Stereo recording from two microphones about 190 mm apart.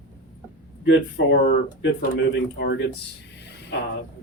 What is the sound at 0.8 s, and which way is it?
Speech, 70° left (ahead or behind).